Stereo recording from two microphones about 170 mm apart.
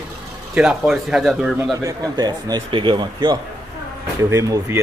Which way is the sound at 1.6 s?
20° right (ahead or behind).